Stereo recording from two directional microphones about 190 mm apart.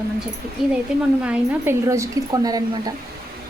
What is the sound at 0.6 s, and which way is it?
A woman's voice, centre (ahead or behind).